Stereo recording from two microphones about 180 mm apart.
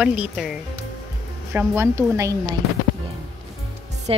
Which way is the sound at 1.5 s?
15° right (ahead or behind).